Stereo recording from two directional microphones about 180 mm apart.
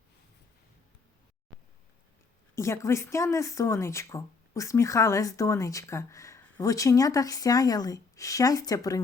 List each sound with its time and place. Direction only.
2.6 s speech: 15° left (ahead or behind)